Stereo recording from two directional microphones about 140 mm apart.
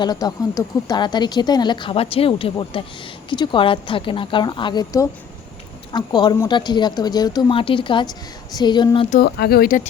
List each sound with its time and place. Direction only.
0.0 s speech: 30° left (ahead or behind)
9.0 s speech: 90° left